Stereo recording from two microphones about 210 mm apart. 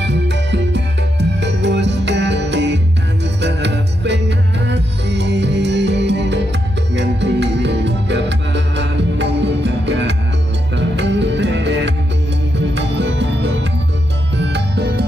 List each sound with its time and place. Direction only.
0.0 s music: 55° right (ahead or behind)